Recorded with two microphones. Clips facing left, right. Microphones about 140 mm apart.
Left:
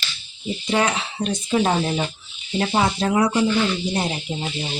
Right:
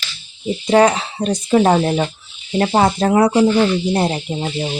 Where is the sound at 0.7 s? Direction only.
40° right (ahead or behind); by 2.0 s 55° right (ahead or behind).